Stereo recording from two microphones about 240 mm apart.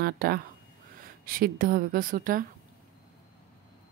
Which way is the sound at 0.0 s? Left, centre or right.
Right.